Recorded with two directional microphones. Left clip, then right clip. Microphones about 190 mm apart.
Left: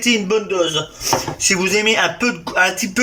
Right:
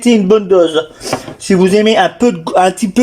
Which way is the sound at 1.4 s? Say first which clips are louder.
Right 7 dB; 35° right (ahead or behind).